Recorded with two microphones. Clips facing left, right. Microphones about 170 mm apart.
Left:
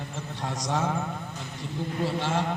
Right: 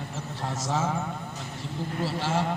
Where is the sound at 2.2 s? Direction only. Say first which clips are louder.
Right 3 dB; 5° right (ahead or behind).